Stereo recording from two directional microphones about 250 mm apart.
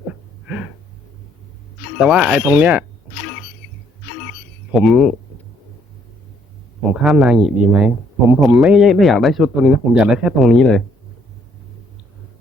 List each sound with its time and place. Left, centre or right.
0.4 s a sound: centre
2.0 s speech: centre
4.7 s speech: centre
6.9 s speech: centre